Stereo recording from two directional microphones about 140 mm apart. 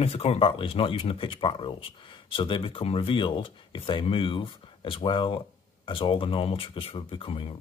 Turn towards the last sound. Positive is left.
turn(degrees=40)  # may be behind; listen again after turning